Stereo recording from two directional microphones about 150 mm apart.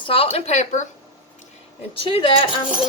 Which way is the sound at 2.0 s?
35° left (ahead or behind).